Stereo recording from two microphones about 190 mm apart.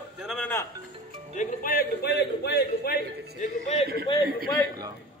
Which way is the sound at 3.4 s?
35° left (ahead or behind).